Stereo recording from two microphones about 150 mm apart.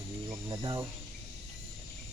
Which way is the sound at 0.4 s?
30° right (ahead or behind).